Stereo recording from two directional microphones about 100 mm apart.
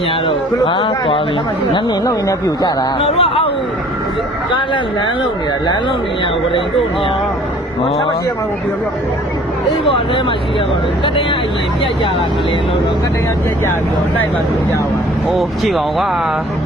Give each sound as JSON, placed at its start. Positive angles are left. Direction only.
{"t": 0.3, "sound": "speech", "side_deg": 55}
{"t": 2.0, "sound": "speech", "side_deg": 35}
{"t": 3.0, "sound": "speech", "side_deg": 70}
{"t": 15.4, "sound": "speech", "side_deg": 0}